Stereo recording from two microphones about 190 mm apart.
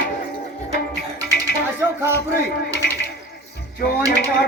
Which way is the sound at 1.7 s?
15° right (ahead or behind).